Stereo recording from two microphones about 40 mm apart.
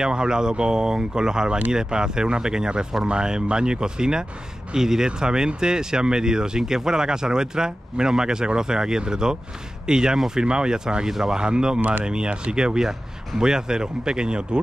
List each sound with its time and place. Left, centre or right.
0.0 s speech: centre